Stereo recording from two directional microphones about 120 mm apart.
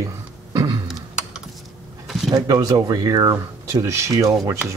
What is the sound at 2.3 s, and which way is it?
Speech, 30° right (ahead or behind).